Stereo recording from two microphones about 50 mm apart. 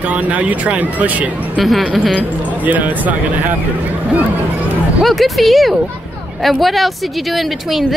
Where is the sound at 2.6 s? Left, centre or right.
Right.